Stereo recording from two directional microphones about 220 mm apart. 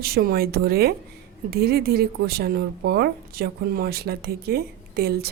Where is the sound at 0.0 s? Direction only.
40° right (ahead or behind).